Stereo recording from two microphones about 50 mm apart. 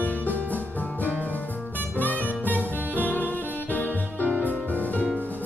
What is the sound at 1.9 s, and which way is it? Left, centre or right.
Music, left.